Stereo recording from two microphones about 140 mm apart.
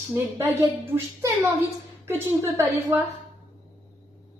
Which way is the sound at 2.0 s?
15° right (ahead or behind).